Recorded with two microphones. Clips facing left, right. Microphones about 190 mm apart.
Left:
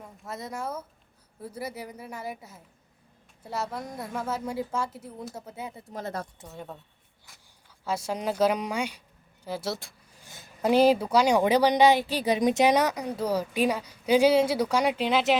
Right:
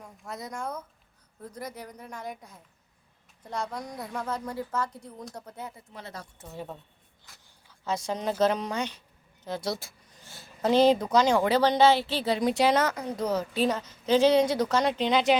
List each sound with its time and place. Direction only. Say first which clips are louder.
0.0 s a woman's voice: left 1 dB; centre (ahead or behind)
5.9 s a woman's voice: left 8 dB; 45° left (ahead or behind)
6.5 s a woman's voice: right 2 dB; centre (ahead or behind)
7.9 s a woman's voice: even; 10° left (ahead or behind)
10.1 s speech: even; 15° left (ahead or behind)